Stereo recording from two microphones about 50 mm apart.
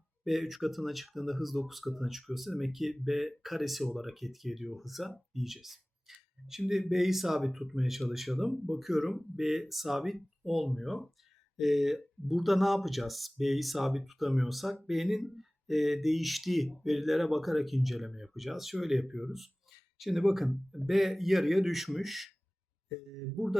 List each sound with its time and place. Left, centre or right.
0.3 s speech: centre